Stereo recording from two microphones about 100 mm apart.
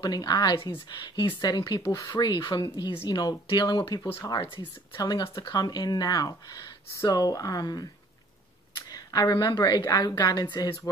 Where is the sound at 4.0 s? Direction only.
20° left (ahead or behind).